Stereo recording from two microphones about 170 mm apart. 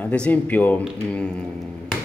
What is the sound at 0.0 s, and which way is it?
Speech, 10° left (ahead or behind).